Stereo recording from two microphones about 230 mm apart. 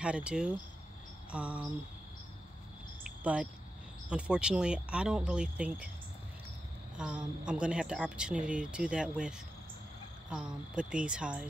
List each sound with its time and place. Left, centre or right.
0.0 s speech: centre
4.1 s speech: centre
7.0 s speech: centre
10.3 s speech: centre